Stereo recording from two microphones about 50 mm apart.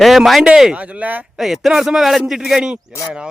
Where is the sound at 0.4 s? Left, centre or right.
Centre.